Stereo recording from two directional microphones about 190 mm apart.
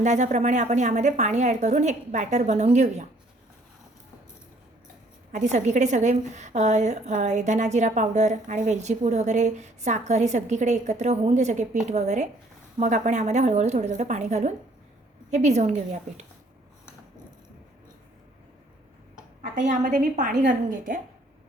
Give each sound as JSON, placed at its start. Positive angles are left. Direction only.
{"t": 0.0, "sound": "a woman's voice", "side_deg": -40}
{"t": 5.3, "sound": "a woman's voice", "side_deg": -40}
{"t": 19.8, "sound": "a woman's voice", "side_deg": -45}